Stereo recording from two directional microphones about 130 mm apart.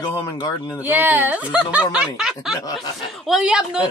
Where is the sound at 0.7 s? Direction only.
15° right (ahead or behind).